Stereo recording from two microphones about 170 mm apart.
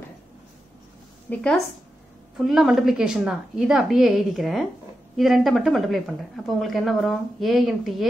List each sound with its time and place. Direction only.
1.3 s a woman's voice: 5° left (ahead or behind)